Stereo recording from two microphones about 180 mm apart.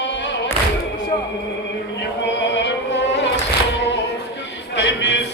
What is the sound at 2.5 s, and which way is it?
Carnatic music, 75° left (ahead or behind).